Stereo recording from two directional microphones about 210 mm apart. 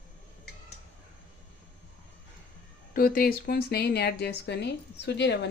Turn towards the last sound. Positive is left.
turn(degrees=55)  # may be behind; listen again after turning